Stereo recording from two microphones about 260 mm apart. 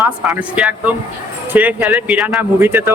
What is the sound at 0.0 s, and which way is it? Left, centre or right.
Speech, centre.